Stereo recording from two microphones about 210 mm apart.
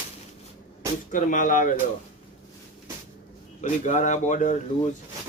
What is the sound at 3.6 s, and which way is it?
Speech, 35° left (ahead or behind).